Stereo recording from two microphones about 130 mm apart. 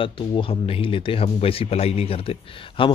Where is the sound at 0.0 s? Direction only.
40° left (ahead or behind).